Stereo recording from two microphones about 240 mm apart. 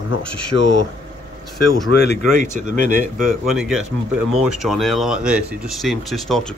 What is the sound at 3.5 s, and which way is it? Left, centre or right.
Speech, centre.